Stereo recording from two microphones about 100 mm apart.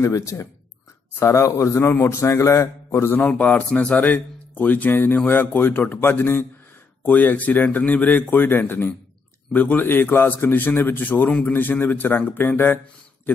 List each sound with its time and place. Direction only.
0.0 s a man's voice: 30° left (ahead or behind)